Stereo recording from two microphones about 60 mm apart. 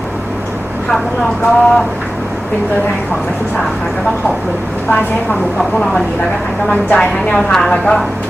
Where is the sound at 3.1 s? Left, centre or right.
Centre.